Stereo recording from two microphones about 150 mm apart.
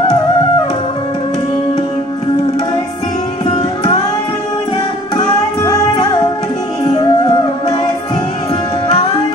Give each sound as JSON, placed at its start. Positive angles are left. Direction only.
{"t": 5.1, "sound": "music", "side_deg": 30}